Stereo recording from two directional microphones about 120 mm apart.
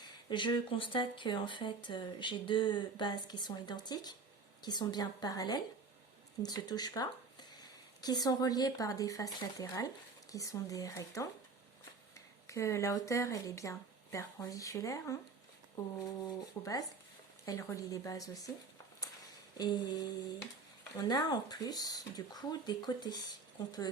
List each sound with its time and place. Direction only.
0.0 s speech: 40° left (ahead or behind)
19.5 s speech: 35° left (ahead or behind)